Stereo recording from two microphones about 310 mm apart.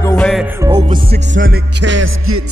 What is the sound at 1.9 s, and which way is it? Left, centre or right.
Music, right.